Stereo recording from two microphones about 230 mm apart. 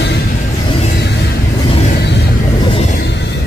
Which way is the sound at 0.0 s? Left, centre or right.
Left.